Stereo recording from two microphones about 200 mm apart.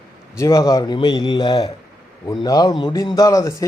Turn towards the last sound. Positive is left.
turn(degrees=15)  # may be behind; listen again after turning